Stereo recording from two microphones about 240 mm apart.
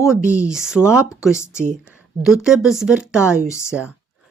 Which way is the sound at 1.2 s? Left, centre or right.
Centre.